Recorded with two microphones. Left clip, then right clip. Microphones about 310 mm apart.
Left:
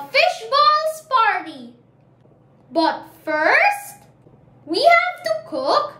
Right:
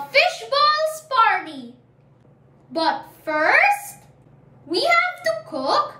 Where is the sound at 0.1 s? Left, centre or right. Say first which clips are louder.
Left 1 dB; centre.